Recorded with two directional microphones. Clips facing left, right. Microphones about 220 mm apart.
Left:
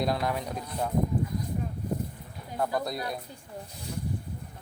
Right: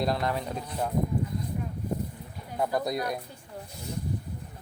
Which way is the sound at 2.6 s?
20° right (ahead or behind).